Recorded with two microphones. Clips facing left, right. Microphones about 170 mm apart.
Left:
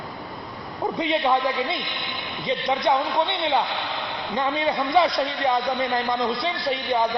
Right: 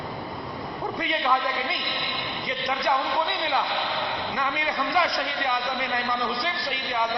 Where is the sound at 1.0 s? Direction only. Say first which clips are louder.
Left 4 dB; 25° left (ahead or behind).